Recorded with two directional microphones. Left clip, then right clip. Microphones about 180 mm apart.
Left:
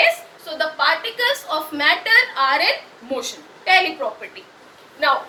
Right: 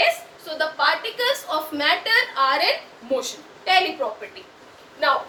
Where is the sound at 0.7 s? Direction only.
20° right (ahead or behind).